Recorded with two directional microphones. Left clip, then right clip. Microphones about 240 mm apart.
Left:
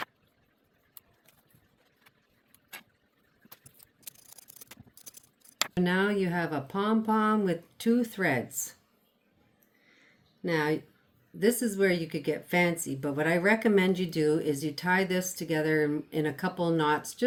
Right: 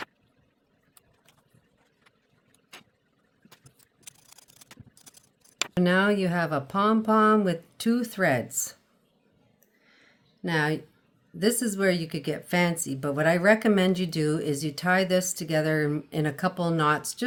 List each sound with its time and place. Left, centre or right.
4.0 s a sound: centre
5.8 s speech: right
10.4 s speech: right